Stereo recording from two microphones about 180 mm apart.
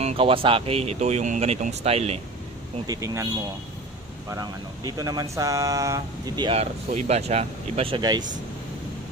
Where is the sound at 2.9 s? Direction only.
20° right (ahead or behind).